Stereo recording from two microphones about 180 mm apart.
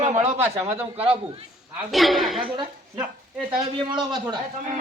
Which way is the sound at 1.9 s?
Centre (ahead or behind).